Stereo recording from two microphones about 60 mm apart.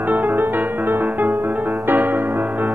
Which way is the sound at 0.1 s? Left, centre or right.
Right.